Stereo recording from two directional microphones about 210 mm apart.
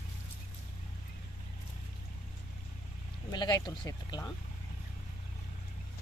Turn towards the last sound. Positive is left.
turn(degrees=15)  # may be behind; listen again after turning